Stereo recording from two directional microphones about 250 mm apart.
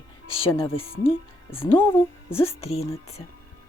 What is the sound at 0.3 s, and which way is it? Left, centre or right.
Speech, left.